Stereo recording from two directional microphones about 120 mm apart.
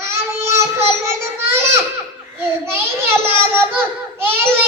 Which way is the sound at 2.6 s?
20° right (ahead or behind).